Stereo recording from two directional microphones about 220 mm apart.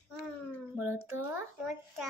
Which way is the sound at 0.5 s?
10° right (ahead or behind).